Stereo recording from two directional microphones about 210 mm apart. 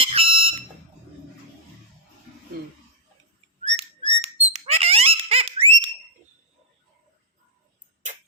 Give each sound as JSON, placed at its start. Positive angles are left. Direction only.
{"t": 0.0, "sound": "fire alarm", "side_deg": -25}
{"t": 3.6, "sound": "bird", "side_deg": -30}